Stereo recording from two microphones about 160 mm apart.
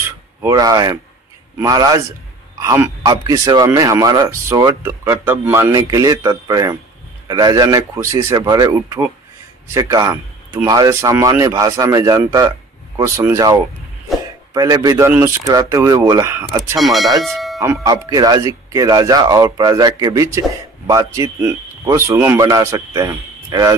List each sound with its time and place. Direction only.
0.4 s speech: 20° right (ahead or behind)
16.7 s speech: centre (ahead or behind)
17.8 s speech: 25° right (ahead or behind)